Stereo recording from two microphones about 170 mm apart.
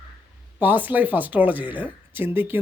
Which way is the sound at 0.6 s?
10° right (ahead or behind).